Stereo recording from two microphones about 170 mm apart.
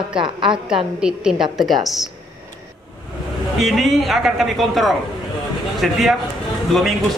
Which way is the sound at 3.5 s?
Centre (ahead or behind).